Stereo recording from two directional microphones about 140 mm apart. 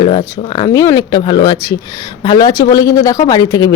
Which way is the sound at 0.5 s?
25° left (ahead or behind).